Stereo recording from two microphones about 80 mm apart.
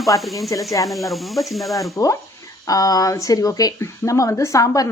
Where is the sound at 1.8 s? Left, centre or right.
Left.